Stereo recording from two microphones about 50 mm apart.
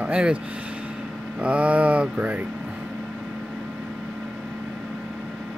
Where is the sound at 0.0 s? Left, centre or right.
Right.